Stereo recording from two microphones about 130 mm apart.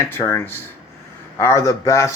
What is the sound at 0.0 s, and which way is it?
Speech, 20° left (ahead or behind).